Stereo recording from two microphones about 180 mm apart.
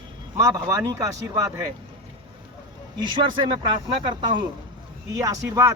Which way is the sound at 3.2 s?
25° right (ahead or behind).